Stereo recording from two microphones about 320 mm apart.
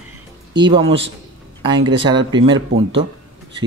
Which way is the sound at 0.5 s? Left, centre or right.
Centre.